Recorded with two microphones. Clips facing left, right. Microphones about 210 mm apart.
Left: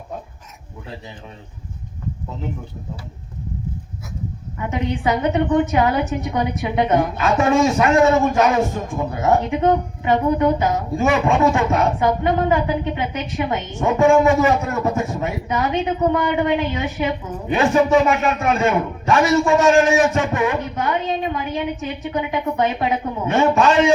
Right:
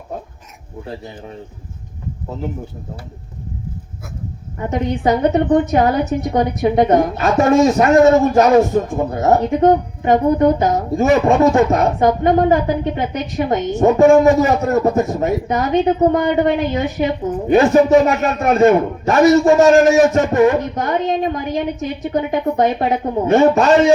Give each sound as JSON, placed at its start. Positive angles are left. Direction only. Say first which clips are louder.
{"t": 4.5, "sound": "a woman's voice", "louder": "right 4 dB", "side_deg": -40}